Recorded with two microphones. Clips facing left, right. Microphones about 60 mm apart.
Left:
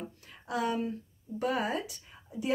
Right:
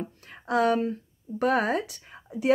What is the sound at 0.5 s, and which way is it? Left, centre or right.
A woman's voice, right.